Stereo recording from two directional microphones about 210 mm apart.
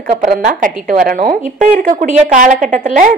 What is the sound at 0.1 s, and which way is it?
A woman's voice, 40° right (ahead or behind).